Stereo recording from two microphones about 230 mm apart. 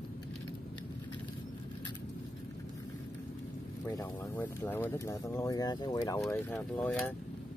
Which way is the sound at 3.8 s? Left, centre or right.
Centre.